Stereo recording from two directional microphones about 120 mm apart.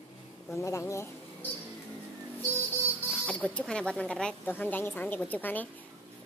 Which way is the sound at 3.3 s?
10° left (ahead or behind).